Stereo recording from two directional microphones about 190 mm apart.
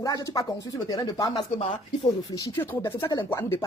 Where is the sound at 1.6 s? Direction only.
30° left (ahead or behind).